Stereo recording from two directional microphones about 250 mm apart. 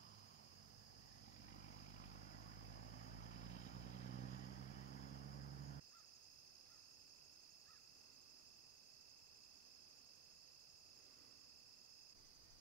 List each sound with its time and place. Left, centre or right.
1.7 s vehicle: left